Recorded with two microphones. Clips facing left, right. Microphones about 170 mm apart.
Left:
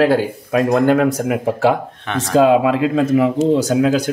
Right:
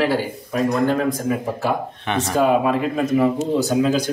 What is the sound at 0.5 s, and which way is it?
Speech, 65° left (ahead or behind).